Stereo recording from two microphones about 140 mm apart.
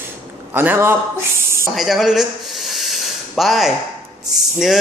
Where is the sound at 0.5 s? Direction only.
15° right (ahead or behind).